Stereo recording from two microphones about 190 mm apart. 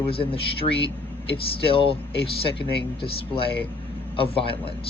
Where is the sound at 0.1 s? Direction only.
30° left (ahead or behind).